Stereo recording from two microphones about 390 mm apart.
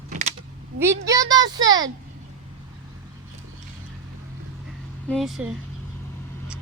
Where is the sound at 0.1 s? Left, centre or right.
Centre.